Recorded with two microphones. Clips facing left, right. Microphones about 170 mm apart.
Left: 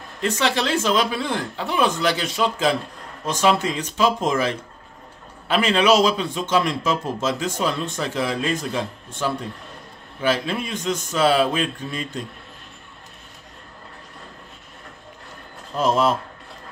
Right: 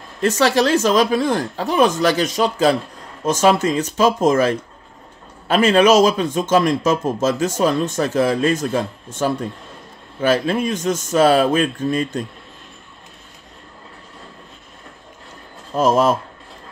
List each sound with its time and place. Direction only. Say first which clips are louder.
0.2 s speech: right 6 dB; 40° right (ahead or behind)
15.7 s speech: right 4 dB; 45° right (ahead or behind)